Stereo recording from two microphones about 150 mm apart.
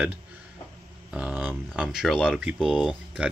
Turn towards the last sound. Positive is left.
turn(degrees=-5)  # may be behind; listen again after turning